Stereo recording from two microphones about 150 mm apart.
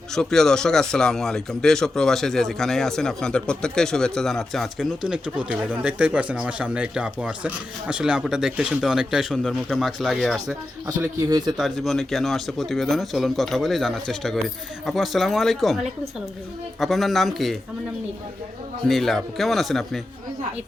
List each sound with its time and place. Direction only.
0.1 s speech: 5° left (ahead or behind)
11.3 s speech: 25° right (ahead or behind)
11.5 s speech: centre (ahead or behind)
18.9 s speech: centre (ahead or behind)